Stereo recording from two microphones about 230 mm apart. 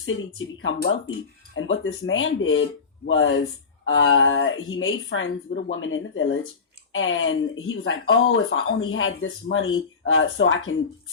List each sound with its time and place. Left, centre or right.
0.0 s speech: left
0.8 s speech: left
1.5 s speech: left